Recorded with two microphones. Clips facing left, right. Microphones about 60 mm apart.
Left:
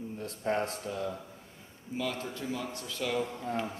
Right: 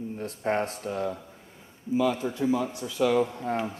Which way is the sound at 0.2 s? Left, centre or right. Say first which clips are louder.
Right 4 dB; right.